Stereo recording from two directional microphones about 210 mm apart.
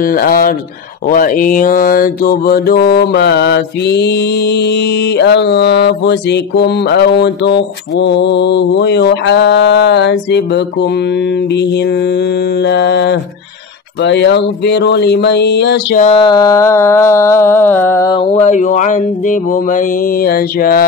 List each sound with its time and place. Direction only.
0.0 s mantra: 45° left (ahead or behind)
12.6 s mantra: 55° left (ahead or behind)
16.0 s a sound: 25° left (ahead or behind)
18.3 s mantra: 35° left (ahead or behind)